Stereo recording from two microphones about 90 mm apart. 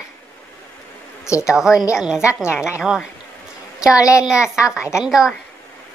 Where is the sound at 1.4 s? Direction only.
5° right (ahead or behind).